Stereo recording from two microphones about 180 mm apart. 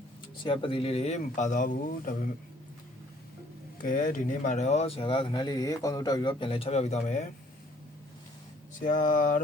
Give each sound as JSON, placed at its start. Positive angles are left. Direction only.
{"t": 0.4, "sound": "speech", "side_deg": 30}
{"t": 3.8, "sound": "speech", "side_deg": 45}
{"t": 8.8, "sound": "speech", "side_deg": 45}